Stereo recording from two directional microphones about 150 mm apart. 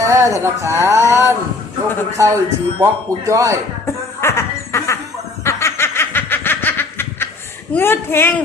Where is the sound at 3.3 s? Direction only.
20° right (ahead or behind).